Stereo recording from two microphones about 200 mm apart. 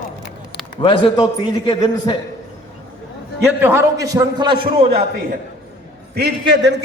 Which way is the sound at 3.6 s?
10° right (ahead or behind).